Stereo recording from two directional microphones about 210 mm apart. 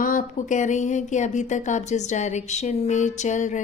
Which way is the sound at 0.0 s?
40° left (ahead or behind).